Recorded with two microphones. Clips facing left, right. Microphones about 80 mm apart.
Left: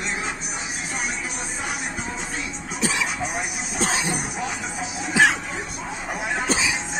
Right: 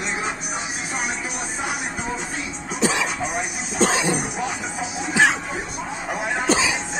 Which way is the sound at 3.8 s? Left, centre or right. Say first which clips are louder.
Right 5 dB; right.